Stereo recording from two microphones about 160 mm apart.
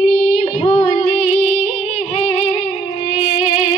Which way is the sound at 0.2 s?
45° left (ahead or behind).